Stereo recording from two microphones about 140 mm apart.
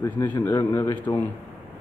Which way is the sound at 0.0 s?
25° left (ahead or behind).